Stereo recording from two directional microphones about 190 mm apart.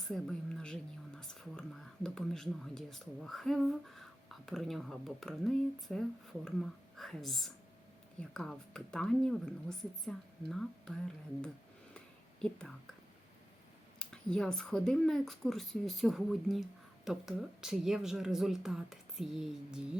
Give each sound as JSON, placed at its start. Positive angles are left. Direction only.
{"t": 0.0, "sound": "speech", "side_deg": 0}
{"t": 11.9, "sound": "whispering", "side_deg": 5}
{"t": 14.0, "sound": "speech", "side_deg": 5}